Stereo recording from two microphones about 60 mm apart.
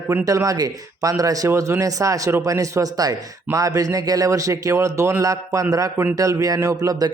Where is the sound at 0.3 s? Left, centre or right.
Right.